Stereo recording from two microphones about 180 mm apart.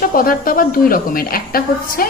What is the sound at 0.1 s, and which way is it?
A woman's voice, 55° left (ahead or behind).